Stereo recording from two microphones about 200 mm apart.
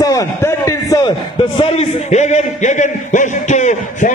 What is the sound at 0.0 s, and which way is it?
A man's voice, 15° left (ahead or behind).